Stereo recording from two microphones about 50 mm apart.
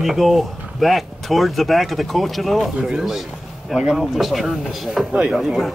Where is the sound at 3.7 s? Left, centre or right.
Centre.